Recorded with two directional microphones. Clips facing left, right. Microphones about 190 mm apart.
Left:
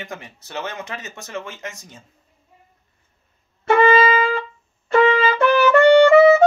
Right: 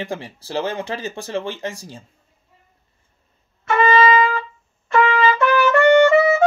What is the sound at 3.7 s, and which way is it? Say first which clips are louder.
Wind instrument: left 1 dB; 55° left (ahead or behind).